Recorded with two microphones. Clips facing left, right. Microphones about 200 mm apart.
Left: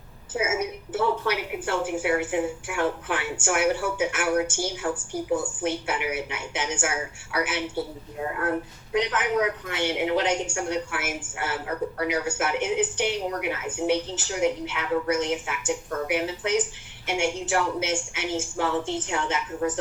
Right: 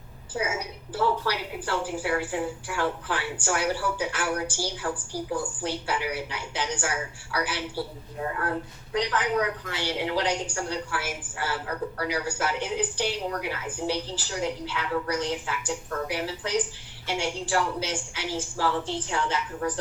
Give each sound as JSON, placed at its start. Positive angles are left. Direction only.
{"t": 0.3, "sound": "speech", "side_deg": 25}